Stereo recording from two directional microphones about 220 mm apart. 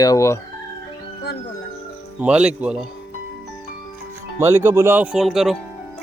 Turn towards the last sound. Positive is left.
turn(degrees=0)  # may be behind; listen again after turning